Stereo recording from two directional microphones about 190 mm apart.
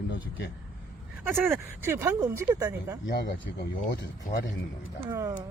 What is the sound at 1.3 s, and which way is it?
Speech, 10° right (ahead or behind).